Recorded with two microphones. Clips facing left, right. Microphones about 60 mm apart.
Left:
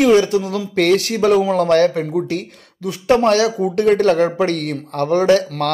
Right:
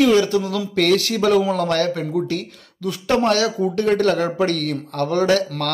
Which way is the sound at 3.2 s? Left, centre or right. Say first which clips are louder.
Left 3 dB; left.